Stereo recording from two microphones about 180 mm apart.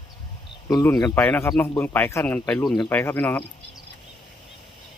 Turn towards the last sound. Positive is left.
turn(degrees=10)  # may be behind; listen again after turning